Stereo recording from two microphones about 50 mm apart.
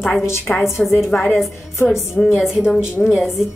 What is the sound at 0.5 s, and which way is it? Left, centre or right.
Speech, left.